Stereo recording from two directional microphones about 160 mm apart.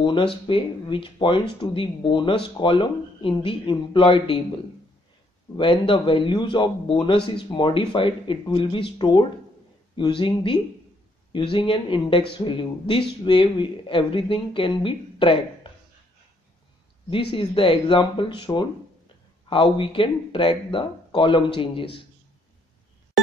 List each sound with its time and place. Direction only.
0.0 s speech: 30° left (ahead or behind)
5.6 s speech: 30° left (ahead or behind)
17.1 s speech: 35° left (ahead or behind)